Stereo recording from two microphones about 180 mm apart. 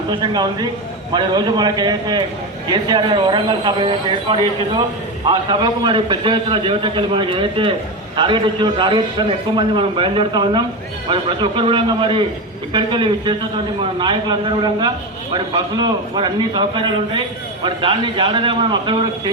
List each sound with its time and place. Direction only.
0.1 s a man's voice: 25° right (ahead or behind)